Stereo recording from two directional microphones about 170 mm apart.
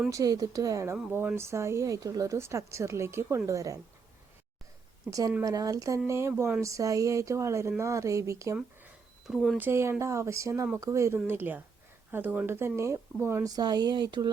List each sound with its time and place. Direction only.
0.1 s speech: 20° right (ahead or behind)
5.4 s speech: 20° right (ahead or behind)
8.5 s a sound: 5° right (ahead or behind)
9.6 s speech: 15° right (ahead or behind)